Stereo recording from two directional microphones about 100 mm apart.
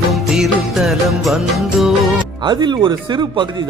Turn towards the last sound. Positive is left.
turn(degrees=-50)  # may be behind; listen again after turning